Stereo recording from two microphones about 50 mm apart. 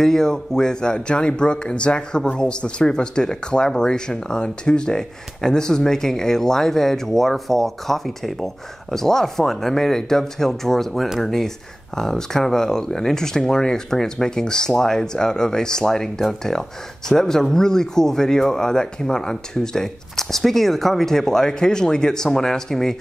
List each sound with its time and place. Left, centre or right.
0.0 s speech: centre